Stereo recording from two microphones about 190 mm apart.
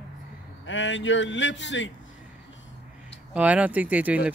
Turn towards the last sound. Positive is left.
turn(degrees=-5)  # may be behind; listen again after turning